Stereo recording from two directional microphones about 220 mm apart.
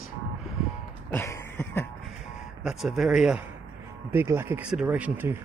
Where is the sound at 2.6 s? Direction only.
Centre (ahead or behind).